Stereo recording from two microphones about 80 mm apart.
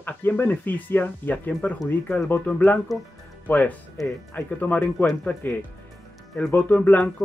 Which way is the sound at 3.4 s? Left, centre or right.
Left.